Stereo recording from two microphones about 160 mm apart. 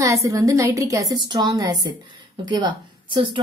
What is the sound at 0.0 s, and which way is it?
A woman's voice, 20° right (ahead or behind).